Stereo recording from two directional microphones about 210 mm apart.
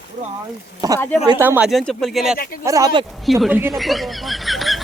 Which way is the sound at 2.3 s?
45° left (ahead or behind).